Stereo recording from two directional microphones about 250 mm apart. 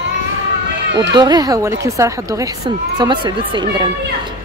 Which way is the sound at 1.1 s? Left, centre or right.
Centre.